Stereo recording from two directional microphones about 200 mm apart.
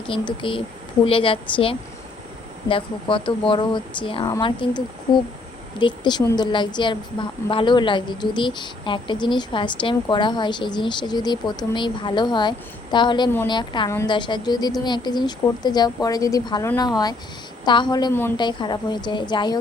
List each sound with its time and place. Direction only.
0.1 s a woman's voice: 25° left (ahead or behind)
5.8 s a woman's voice: 20° left (ahead or behind)
18.1 s a woman's voice: 10° left (ahead or behind)
18.3 s a woman's voice: 25° left (ahead or behind)